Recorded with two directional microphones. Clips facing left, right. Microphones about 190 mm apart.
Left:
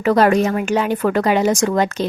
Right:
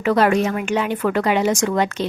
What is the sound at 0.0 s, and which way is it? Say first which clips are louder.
A woman's voice: left 3 dB; 40° left (ahead or behind).